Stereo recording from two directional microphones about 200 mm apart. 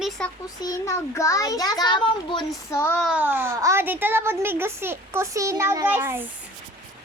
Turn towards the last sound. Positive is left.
turn(degrees=-10)  # may be behind; listen again after turning